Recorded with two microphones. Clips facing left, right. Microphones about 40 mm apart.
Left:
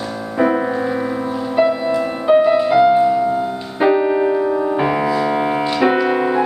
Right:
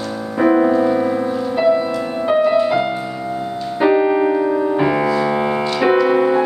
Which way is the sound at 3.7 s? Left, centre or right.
Centre.